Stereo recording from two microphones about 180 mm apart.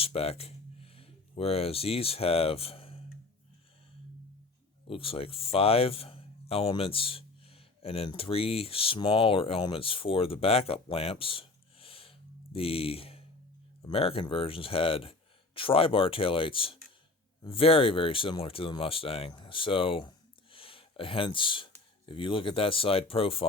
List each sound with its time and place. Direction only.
0.0 s speech: 35° left (ahead or behind)
4.9 s speech: 30° left (ahead or behind)